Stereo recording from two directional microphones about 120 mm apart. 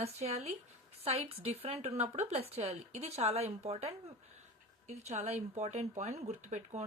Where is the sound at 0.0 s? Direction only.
60° right (ahead or behind).